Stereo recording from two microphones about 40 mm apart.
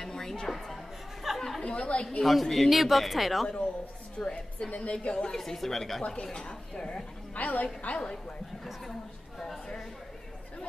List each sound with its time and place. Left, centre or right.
0.0 s a woman's voice: centre
1.3 s chatter: centre
1.6 s a woman's voice: left
2.2 s speech: centre
4.2 s a woman's voice: left
4.9 s a woman's voice: left
5.3 s speech: centre
6.3 s a woman's voice: centre
7.3 s a woman's voice: left